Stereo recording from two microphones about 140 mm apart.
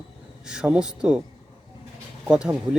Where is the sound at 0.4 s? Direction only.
5° right (ahead or behind).